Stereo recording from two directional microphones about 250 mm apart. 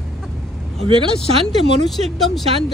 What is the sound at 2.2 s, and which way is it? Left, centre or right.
Speech, centre.